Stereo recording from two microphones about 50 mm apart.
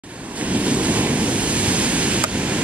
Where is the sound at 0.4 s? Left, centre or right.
Right.